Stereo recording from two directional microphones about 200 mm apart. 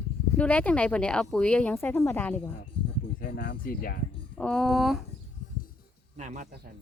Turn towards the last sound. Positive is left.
turn(degrees=-40)  # may be behind; listen again after turning